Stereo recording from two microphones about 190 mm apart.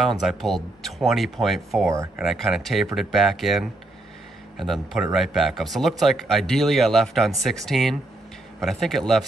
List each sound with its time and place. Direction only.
0.0 s speech: centre (ahead or behind)